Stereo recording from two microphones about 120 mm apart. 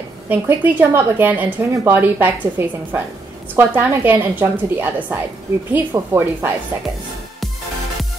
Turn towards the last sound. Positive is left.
turn(degrees=-20)  # may be behind; listen again after turning